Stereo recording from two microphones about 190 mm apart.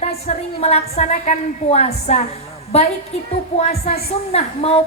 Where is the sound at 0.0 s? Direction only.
35° left (ahead or behind).